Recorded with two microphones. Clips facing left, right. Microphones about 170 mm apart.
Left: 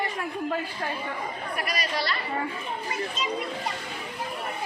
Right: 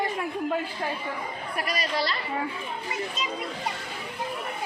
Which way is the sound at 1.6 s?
30° right (ahead or behind).